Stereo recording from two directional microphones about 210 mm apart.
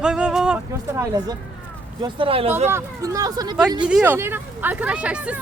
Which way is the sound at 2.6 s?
15° right (ahead or behind).